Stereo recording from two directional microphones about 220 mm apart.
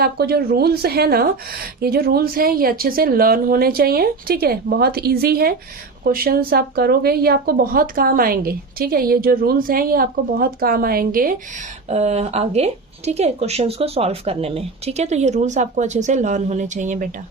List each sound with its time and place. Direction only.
0.0 s a woman's voice: 45° right (ahead or behind)
11.9 s speech: 30° right (ahead or behind)